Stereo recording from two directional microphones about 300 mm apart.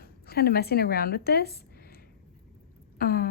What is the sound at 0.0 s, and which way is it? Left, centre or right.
Speech, left.